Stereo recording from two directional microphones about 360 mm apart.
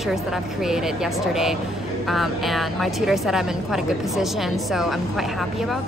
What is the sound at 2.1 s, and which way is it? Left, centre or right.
Speech, centre.